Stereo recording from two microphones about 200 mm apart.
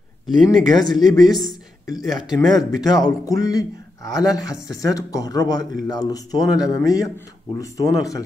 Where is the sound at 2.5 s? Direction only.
20° left (ahead or behind).